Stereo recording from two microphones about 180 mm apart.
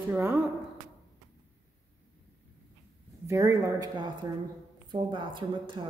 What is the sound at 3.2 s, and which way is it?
Speech, 15° right (ahead or behind).